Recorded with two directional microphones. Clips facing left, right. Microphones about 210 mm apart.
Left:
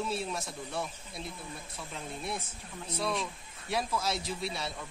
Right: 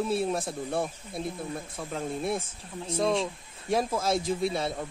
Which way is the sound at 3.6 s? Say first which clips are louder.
Right 6 dB; 50° right (ahead or behind).